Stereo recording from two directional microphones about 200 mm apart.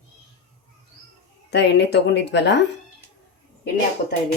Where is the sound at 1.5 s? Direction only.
55° left (ahead or behind).